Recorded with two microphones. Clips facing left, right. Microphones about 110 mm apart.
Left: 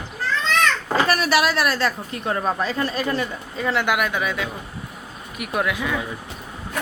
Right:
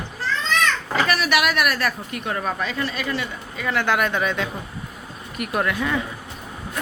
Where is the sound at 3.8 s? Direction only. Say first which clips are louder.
Right 1 dB; 5° left (ahead or behind).